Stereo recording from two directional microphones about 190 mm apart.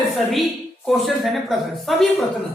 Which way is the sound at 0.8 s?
Centre (ahead or behind).